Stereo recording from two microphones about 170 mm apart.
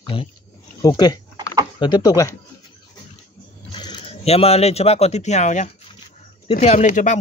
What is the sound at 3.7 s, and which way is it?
Speech, 30° left (ahead or behind).